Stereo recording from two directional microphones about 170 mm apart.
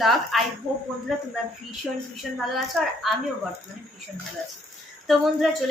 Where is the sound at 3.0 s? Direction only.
Centre (ahead or behind).